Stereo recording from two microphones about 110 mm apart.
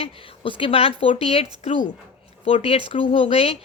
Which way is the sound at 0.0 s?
50° left (ahead or behind).